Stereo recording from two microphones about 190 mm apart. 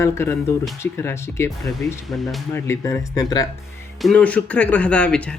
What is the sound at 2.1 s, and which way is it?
Speech, centre (ahead or behind).